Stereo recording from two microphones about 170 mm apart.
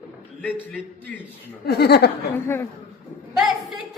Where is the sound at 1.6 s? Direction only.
70° left (ahead or behind).